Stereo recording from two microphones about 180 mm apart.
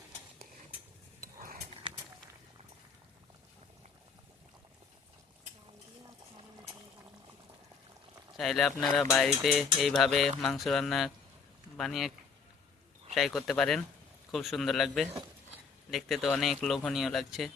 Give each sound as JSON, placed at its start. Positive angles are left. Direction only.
{"t": 8.4, "sound": "speech", "side_deg": 0}
{"t": 13.1, "sound": "speech", "side_deg": 0}